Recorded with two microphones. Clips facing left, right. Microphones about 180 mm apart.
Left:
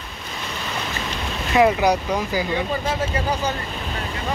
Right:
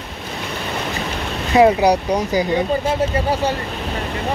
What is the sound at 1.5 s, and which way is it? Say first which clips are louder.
Boat: right 4 dB; 35° right (ahead or behind).